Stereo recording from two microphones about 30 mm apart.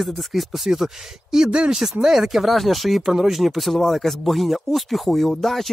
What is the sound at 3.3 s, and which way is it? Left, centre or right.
Speech, centre.